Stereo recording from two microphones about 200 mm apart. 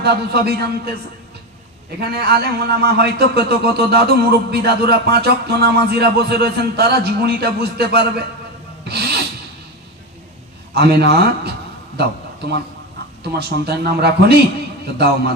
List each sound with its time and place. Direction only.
0.0 s a man's voice: 55° right (ahead or behind)
2.0 s a man's voice: 55° right (ahead or behind)
8.9 s filing: 55° right (ahead or behind)
10.8 s a man's voice: 55° right (ahead or behind)
13.2 s a man's voice: 55° right (ahead or behind)